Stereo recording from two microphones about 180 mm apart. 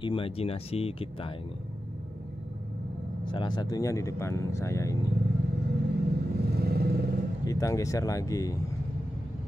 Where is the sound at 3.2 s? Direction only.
25° left (ahead or behind).